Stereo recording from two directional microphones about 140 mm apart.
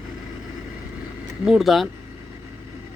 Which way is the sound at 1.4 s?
Centre (ahead or behind).